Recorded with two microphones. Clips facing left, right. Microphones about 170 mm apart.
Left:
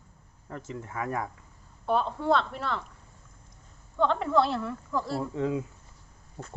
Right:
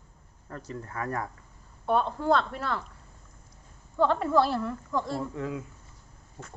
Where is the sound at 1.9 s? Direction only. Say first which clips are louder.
Right 1 dB; centre (ahead or behind).